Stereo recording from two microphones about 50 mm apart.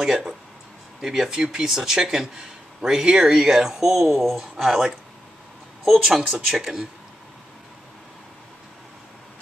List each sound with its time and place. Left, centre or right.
0.0 s speech: centre